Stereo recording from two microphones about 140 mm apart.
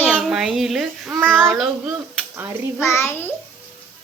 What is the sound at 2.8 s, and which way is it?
Speech, 20° left (ahead or behind).